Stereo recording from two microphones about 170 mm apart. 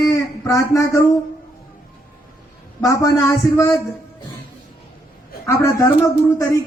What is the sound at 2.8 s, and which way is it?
A man's voice, 20° left (ahead or behind).